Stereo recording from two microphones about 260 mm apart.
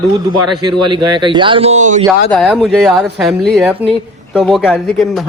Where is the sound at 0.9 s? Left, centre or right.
Centre.